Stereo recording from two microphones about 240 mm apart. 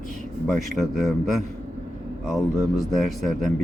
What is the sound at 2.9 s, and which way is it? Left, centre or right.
Speech, centre.